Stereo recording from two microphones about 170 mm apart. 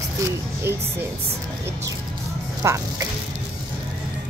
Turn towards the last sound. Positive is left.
turn(degrees=-15)  # may be behind; listen again after turning